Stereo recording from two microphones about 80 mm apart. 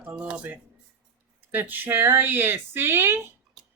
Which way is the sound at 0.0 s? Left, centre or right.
Centre.